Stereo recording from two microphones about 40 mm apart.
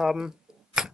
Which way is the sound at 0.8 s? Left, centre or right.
Centre.